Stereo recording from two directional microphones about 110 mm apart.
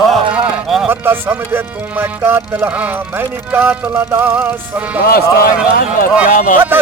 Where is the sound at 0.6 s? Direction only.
Centre (ahead or behind).